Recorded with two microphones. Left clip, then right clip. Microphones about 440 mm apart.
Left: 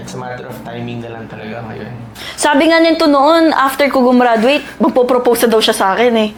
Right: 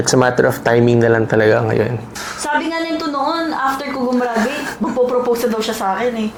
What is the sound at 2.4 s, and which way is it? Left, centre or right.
A woman's voice, left.